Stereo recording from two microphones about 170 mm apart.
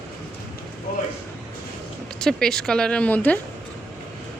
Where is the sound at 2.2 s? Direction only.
5° left (ahead or behind).